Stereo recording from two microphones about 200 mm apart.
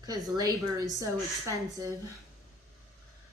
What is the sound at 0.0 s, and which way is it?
A woman's voice, 20° right (ahead or behind).